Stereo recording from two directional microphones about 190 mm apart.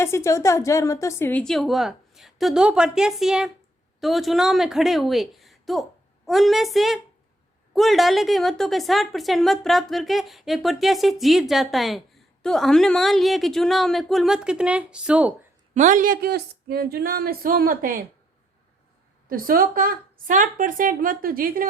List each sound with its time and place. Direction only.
0.0 s a woman's voice: 15° left (ahead or behind); by 15.3 s 5° right (ahead or behind)
15.7 s a woman's voice: 40° right (ahead or behind)
19.3 s a woman's voice: 50° right (ahead or behind)